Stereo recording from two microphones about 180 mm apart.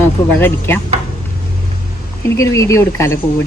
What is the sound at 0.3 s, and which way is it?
Speech, 10° left (ahead or behind).